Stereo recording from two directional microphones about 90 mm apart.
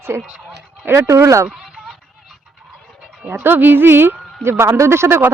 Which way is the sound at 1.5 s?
Centre (ahead or behind).